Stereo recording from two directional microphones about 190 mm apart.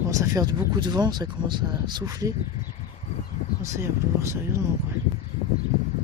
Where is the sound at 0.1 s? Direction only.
15° right (ahead or behind).